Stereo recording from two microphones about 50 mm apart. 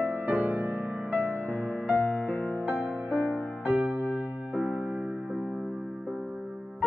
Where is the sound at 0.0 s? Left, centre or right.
Right.